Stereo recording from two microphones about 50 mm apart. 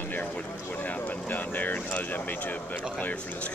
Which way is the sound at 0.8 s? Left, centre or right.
Left.